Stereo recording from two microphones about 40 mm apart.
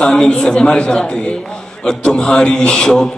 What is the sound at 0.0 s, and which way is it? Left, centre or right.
A man's voice, left.